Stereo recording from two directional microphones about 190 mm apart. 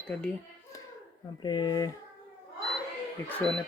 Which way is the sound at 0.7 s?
15° left (ahead or behind).